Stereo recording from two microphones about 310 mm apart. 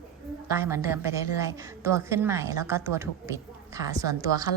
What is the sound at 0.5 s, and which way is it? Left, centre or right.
A woman's voice, centre.